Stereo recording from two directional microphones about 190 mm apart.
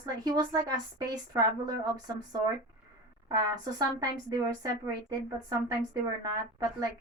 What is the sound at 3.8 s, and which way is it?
Speech, 20° right (ahead or behind).